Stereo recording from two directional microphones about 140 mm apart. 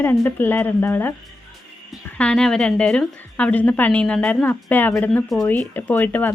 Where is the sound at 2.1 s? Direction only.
5° left (ahead or behind).